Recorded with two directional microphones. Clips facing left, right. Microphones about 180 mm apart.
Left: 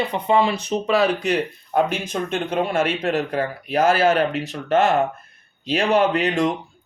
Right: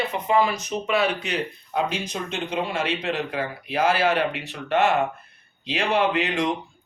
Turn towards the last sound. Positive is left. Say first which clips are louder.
# left 4 dB
turn(degrees=40)  # may be behind; listen again after turning